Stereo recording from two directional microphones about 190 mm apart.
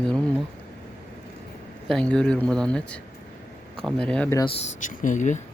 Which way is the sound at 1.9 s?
5° left (ahead or behind).